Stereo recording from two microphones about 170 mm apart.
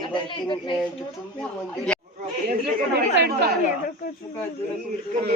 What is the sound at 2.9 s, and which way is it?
Speech, 70° right (ahead or behind).